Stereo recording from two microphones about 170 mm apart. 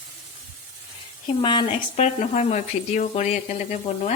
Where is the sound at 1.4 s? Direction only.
35° left (ahead or behind).